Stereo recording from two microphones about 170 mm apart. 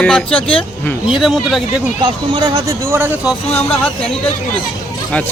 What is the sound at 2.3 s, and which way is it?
Speech, 25° right (ahead or behind).